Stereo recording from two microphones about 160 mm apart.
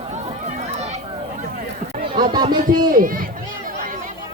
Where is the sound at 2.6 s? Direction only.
60° right (ahead or behind).